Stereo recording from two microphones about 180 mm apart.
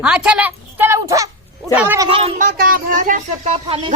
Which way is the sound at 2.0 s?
30° right (ahead or behind).